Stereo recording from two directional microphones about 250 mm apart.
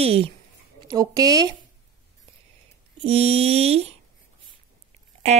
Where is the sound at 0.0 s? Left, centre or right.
Right.